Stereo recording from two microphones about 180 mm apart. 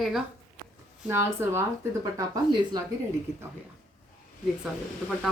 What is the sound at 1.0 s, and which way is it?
Speech, 15° right (ahead or behind).